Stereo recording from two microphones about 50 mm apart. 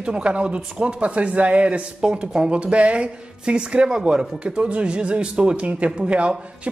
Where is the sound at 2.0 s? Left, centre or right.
Centre.